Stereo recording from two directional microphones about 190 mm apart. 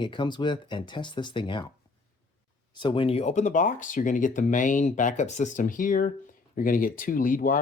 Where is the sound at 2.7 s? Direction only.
25° left (ahead or behind).